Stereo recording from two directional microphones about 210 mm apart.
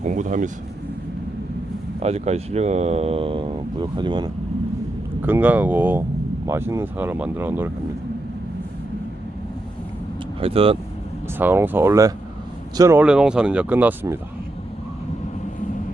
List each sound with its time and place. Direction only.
0.0 s vehicle: 35° right (ahead or behind)
2.0 s speech: 30° right (ahead or behind)
5.2 s speech: 10° right (ahead or behind)
10.4 s speech: 25° right (ahead or behind)
11.3 s speech: 10° right (ahead or behind)